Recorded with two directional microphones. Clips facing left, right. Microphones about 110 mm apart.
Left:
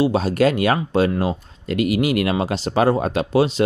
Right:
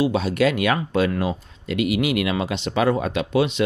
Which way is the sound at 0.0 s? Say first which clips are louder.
Left 3 dB; 40° left (ahead or behind).